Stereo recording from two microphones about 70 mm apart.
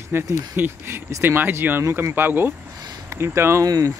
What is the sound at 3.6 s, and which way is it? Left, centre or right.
Speech, right.